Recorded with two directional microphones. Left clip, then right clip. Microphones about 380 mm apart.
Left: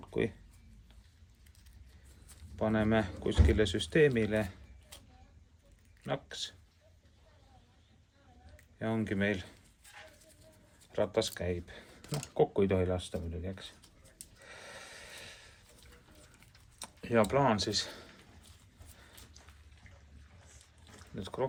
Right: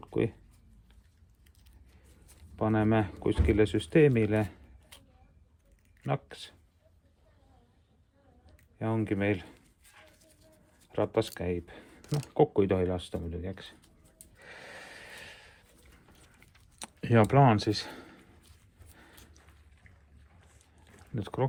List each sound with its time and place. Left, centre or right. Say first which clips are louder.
0.0 s a sound: right 3 dB; centre
2.6 s speech: right 3 dB; centre
6.1 s speech: right 2 dB; centre
8.8 s speech: right 3 dB; centre
10.9 s speech: right 2 dB; centre
14.3 s snort: right 3 dB; centre
16.8 s speech: right 3 dB; centre
21.2 s speech: right 4 dB; centre